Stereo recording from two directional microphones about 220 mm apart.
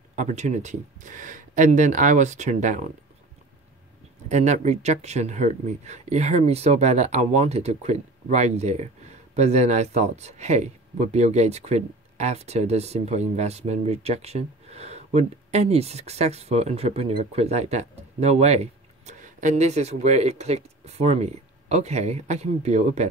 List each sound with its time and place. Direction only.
0.1 s speech: 35° right (ahead or behind)
4.3 s speech: 30° right (ahead or behind)